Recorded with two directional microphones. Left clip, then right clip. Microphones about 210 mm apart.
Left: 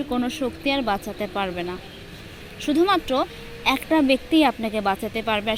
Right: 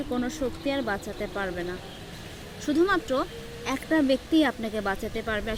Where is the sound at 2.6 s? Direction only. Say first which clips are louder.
Left 4 dB; 15° left (ahead or behind).